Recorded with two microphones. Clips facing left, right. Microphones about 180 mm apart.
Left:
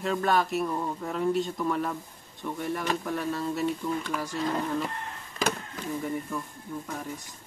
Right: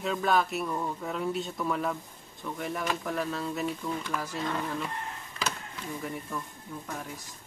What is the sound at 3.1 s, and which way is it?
Speech, centre (ahead or behind).